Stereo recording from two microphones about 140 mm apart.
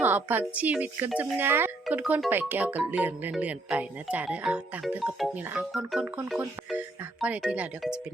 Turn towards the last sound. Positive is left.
turn(degrees=-5)  # may be behind; listen again after turning